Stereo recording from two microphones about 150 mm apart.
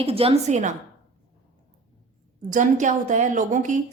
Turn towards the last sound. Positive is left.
turn(degrees=-55)  # may be behind; listen again after turning